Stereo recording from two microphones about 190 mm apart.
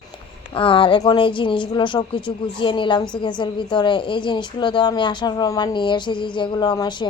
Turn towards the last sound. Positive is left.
turn(degrees=20)  # may be behind; listen again after turning